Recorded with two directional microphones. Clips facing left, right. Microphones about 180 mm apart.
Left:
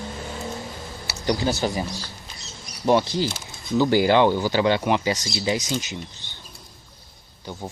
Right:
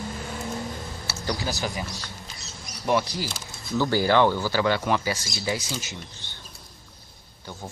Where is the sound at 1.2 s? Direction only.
25° left (ahead or behind).